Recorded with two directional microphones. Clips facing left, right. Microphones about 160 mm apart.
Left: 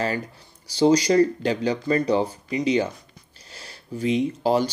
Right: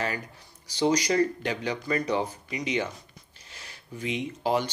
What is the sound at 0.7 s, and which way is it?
Speech, 30° left (ahead or behind).